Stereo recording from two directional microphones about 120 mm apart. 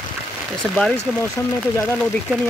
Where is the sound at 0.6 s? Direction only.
5° left (ahead or behind).